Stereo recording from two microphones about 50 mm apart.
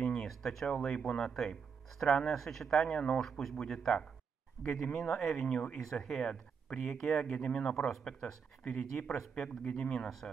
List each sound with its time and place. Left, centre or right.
0.0 s a sound: centre
0.8 s speech: centre
7.3 s speech: left
10.0 s speech: centre